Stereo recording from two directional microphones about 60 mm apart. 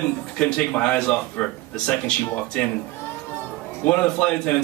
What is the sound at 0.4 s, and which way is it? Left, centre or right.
Speech, centre.